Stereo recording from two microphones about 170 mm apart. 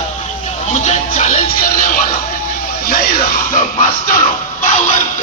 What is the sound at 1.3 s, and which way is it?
Music, 35° left (ahead or behind).